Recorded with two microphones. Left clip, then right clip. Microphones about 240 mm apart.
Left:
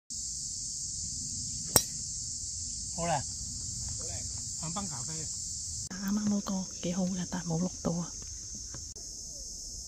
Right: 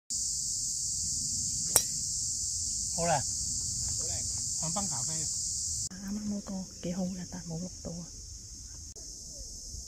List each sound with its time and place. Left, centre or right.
1.8 s cricket: centre
3.0 s cricket: centre
4.0 s cricket: right
6.0 s speech: centre
7.3 s speech: left